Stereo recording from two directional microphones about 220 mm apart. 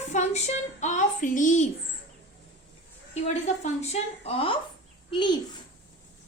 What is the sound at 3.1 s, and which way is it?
A woman's voice, 30° left (ahead or behind).